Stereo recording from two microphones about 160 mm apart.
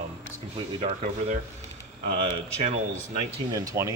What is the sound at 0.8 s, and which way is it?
Speech, 45° right (ahead or behind).